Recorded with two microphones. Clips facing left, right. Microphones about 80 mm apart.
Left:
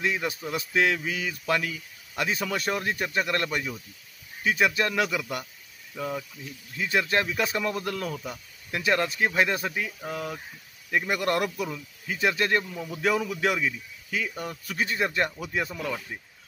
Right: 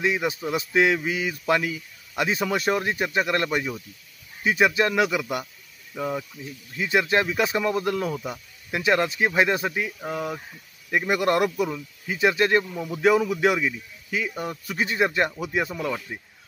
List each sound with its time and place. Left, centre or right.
0.0 s speech: centre
5.9 s speech: centre
11.6 s speech: centre